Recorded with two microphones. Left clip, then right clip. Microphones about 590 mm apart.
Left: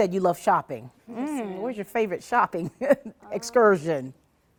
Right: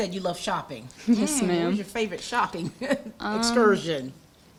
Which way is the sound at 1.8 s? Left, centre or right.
Left.